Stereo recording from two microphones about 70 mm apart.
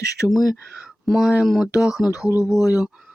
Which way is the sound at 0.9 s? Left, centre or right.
Centre.